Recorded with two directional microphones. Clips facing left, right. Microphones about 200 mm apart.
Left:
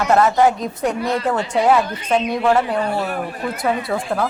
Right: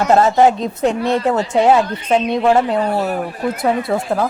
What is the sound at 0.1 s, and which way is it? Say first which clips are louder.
Speech: right 3 dB; 25° right (ahead or behind).